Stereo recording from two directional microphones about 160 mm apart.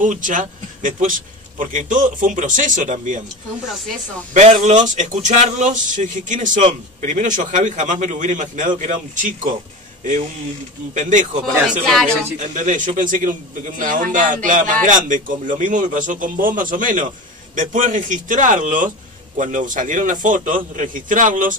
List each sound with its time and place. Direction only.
0.0 s speech: 55° right (ahead or behind)
4.3 s speech: 50° right (ahead or behind)
11.0 s speech: 50° right (ahead or behind)
11.8 s speech: 5° left (ahead or behind)
12.4 s a man's voice: 55° right (ahead or behind)